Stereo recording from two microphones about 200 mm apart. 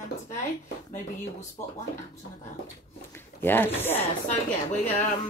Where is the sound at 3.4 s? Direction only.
10° left (ahead or behind).